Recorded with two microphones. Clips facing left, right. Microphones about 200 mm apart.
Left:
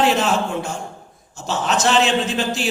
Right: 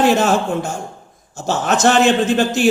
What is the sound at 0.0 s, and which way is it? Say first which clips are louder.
A man's voice: right 4 dB; 45° right (ahead or behind).